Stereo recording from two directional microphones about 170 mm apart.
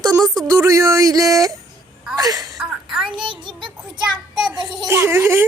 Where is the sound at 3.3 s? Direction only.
30° right (ahead or behind).